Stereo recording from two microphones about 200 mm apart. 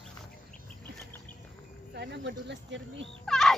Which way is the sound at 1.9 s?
60° right (ahead or behind).